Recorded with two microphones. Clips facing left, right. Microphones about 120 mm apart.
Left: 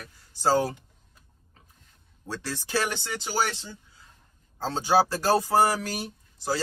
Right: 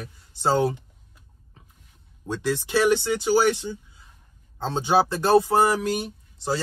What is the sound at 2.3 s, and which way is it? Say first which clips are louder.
Speech: right 6 dB; 20° right (ahead or behind).